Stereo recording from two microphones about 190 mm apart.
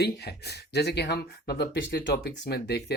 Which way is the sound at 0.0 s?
60° left (ahead or behind).